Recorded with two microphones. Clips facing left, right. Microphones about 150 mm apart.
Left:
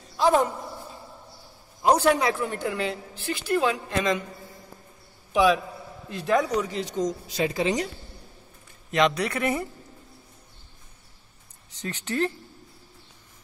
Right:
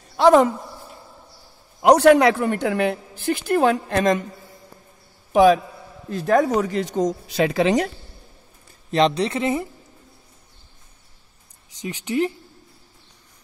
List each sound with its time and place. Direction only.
0.2 s a woman's voice: 90° right
1.8 s a woman's voice: 70° right (ahead or behind); by 4.2 s 50° right (ahead or behind)
5.3 s a man's voice: 45° right (ahead or behind); by 7.9 s 70° right (ahead or behind)
8.9 s speech: 30° right (ahead or behind)
11.8 s speech: 15° right (ahead or behind)